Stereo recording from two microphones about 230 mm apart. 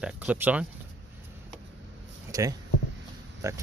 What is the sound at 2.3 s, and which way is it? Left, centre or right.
Speech, centre.